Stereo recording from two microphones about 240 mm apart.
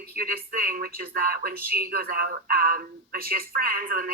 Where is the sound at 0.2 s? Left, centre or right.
Right.